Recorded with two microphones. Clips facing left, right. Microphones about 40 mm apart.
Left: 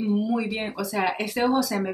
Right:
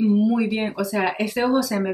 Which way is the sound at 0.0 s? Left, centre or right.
Centre.